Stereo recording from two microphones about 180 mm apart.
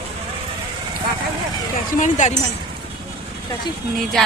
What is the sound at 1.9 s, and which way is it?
Speech, 45° left (ahead or behind).